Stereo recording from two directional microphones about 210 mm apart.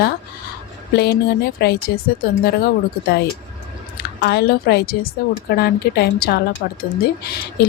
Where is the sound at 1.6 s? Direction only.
50° left (ahead or behind).